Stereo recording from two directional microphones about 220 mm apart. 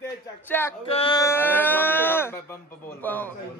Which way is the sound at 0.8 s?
25° left (ahead or behind).